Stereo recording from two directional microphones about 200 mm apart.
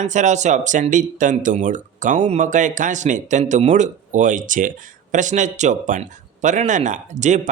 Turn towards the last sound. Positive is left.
turn(degrees=-35)  # may be behind; listen again after turning